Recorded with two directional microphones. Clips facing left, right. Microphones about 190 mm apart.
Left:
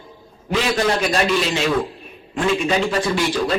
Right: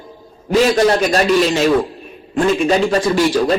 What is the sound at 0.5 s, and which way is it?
A man's voice, 40° right (ahead or behind).